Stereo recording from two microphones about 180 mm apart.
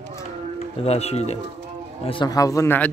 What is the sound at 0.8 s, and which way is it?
Speech, 35° left (ahead or behind).